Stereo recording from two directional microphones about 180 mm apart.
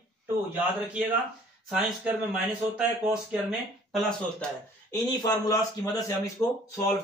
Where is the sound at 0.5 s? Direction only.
10° right (ahead or behind).